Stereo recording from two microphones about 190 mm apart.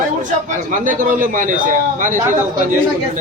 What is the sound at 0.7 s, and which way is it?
A man's voice, 45° right (ahead or behind).